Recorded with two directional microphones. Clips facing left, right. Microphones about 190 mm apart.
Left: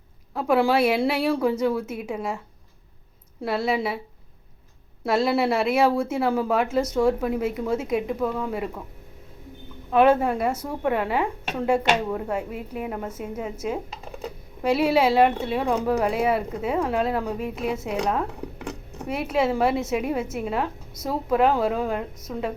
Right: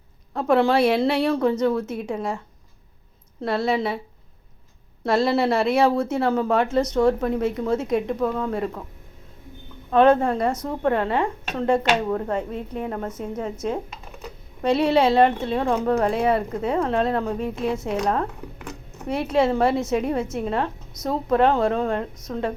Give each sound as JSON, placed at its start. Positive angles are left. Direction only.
{"t": 0.3, "sound": "a woman's voice", "side_deg": 5}
{"t": 3.4, "sound": "speech", "side_deg": 5}
{"t": 5.0, "sound": "a woman's voice", "side_deg": 5}
{"t": 9.9, "sound": "a woman's voice", "side_deg": 10}